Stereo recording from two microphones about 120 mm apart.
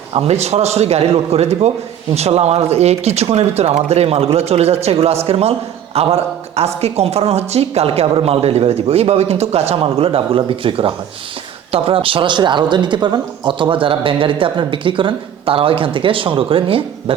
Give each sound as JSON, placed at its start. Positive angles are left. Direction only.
{"t": 0.1, "sound": "speech", "side_deg": -60}